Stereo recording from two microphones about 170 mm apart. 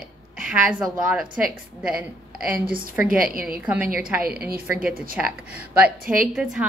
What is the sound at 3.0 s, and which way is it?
Speech, 55° right (ahead or behind).